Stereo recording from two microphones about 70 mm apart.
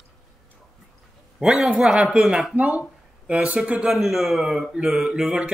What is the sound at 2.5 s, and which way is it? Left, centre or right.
A man's voice, centre.